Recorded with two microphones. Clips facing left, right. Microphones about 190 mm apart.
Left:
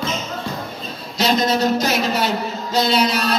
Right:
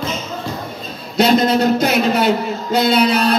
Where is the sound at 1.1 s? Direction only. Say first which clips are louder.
Right 5 dB; 55° right (ahead or behind).